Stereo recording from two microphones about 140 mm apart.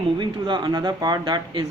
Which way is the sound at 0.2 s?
35° right (ahead or behind).